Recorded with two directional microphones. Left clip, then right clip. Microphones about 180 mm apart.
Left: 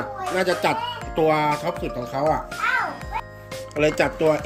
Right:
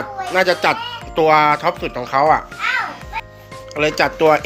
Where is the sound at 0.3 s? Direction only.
10° left (ahead or behind).